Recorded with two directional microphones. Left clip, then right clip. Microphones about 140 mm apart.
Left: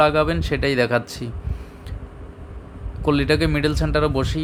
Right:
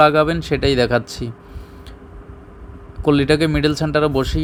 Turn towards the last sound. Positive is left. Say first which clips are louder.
# right 3 dB
turn(degrees=-20)  # may be behind; listen again after turning